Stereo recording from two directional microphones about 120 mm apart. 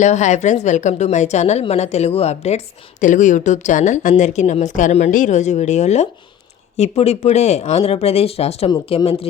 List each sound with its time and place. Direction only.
0.0 s a woman's voice: 75° left (ahead or behind)
3.0 s speech: 90° left
4.2 s a woman's voice: 75° left (ahead or behind); by 9.3 s 55° left (ahead or behind)